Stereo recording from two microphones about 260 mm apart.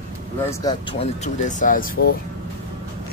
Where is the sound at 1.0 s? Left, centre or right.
Left.